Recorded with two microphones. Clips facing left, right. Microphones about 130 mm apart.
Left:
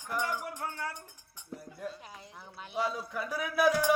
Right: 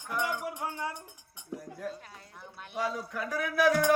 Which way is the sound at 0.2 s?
15° right (ahead or behind).